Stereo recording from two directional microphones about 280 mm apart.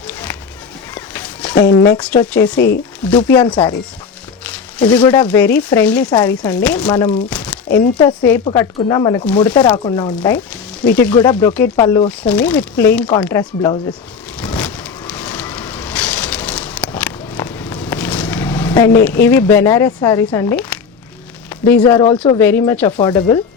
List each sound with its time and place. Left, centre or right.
0.1 s music: centre
0.9 s walk: centre
1.7 s speech: centre
3.4 s speech: centre
4.4 s a sound: centre
5.2 s speech: centre
7.3 s a sound: centre
7.9 s speech: centre
9.7 s speech: centre
10.2 s speech: centre
14.3 s vehicle: centre
18.7 s speech: centre
21.7 s speech: centre